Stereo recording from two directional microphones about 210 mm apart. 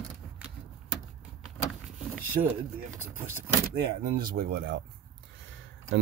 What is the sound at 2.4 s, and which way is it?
Speech, 35° right (ahead or behind).